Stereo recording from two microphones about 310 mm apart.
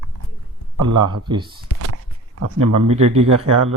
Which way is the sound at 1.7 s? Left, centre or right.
Right.